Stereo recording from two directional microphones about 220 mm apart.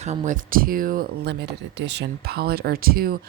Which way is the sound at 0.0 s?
30° right (ahead or behind).